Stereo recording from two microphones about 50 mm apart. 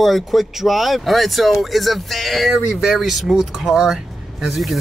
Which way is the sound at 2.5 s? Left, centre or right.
Centre.